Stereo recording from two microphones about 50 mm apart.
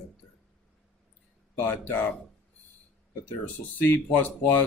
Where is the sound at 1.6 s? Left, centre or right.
Left.